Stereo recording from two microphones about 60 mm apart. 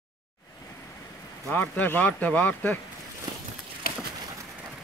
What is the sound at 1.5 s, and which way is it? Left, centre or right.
Speech, left.